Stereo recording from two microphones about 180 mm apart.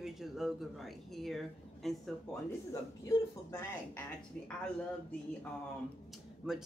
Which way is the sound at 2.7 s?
15° left (ahead or behind).